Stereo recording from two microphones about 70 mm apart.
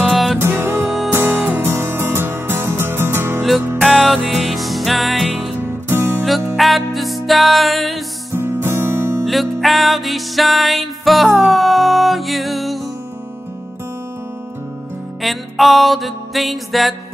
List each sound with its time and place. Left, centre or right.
0.4 s music: right
3.8 s music: centre
5.6 s music: right
6.5 s music: centre
8.4 s music: right
9.2 s music: centre
15.2 s music: centre